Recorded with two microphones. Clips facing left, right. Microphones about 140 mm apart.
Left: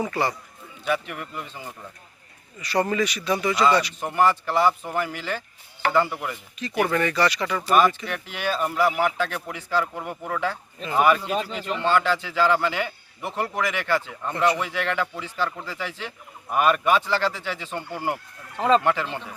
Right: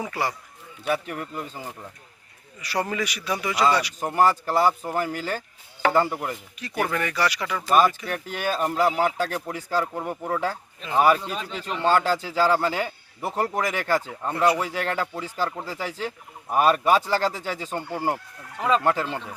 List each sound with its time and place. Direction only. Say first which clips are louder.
0.0 s speech: left 3 dB; 10° right (ahead or behind)
0.9 s speech: even; 35° right (ahead or behind)
2.6 s speech: left 4 dB; 10° right (ahead or behind)
4.0 s speech: right 1 dB; 40° right (ahead or behind)
6.6 s speech: left 4 dB; 10° right (ahead or behind)
8.0 s speech: right 1 dB; 40° right (ahead or behind)
10.8 s speech: right 1 dB; centre (ahead or behind)
11.8 s speech: right 1 dB; 40° right (ahead or behind)